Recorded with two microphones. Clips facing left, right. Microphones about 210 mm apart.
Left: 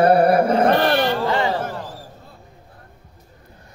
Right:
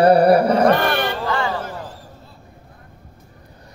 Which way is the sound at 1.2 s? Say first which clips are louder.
Left 2 dB; 20° left (ahead or behind).